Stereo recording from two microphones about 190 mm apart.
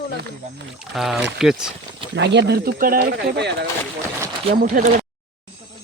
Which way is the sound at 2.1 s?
65° right (ahead or behind).